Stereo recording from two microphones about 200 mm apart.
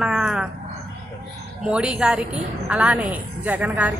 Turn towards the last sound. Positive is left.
turn(degrees=-10)  # may be behind; listen again after turning